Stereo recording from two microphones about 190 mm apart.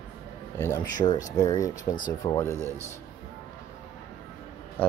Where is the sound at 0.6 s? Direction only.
20° left (ahead or behind).